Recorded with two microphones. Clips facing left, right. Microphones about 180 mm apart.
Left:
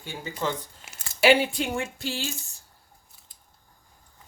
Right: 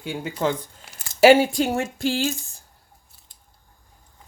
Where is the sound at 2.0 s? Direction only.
90° right.